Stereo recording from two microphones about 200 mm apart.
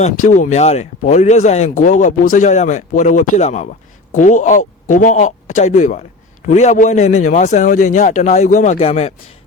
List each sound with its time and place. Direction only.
0.0 s a man's voice: 40° left (ahead or behind)